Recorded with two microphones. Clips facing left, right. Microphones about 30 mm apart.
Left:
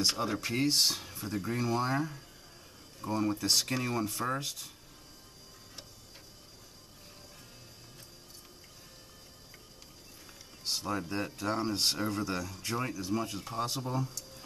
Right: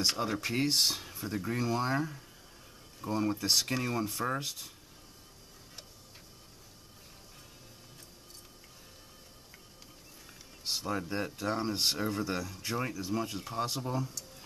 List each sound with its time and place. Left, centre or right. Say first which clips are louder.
0.0 s speech: even; centre
10.6 s speech: even; centre